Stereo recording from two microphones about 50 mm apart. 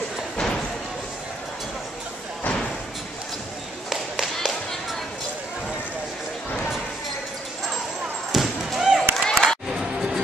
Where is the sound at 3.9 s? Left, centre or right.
Centre.